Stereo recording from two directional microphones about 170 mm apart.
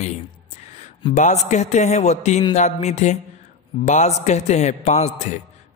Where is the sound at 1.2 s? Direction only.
45° left (ahead or behind).